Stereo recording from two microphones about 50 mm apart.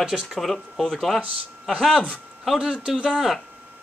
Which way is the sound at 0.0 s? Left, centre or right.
Centre.